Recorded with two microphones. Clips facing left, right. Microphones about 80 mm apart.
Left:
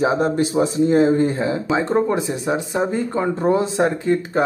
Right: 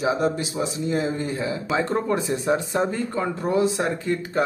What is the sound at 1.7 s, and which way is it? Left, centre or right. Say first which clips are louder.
Speech: left 4 dB; left.